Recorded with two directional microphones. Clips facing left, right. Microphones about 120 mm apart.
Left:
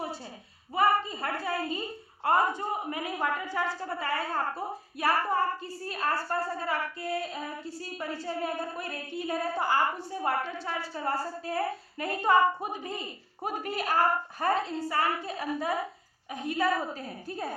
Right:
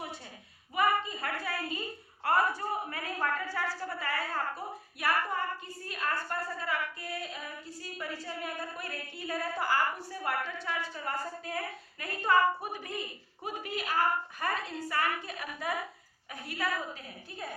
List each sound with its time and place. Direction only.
0.8 s a woman's voice: 30° left (ahead or behind)
13.4 s a woman's voice: 45° left (ahead or behind)